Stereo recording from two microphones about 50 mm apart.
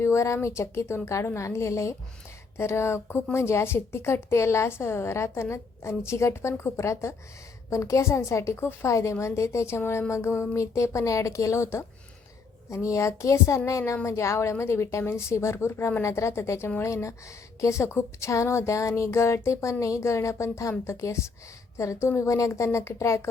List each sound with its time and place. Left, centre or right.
0.0 s speech: left
2.6 s a woman's voice: left
7.7 s speech: left
8.9 s speech: left
9.2 s a woman's voice: left
10.5 s speech: left
12.7 s speech: left
16.0 s speech: left
22.2 s speech: left